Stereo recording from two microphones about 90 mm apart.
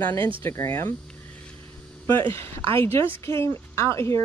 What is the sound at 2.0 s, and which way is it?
A woman's voice, 25° left (ahead or behind).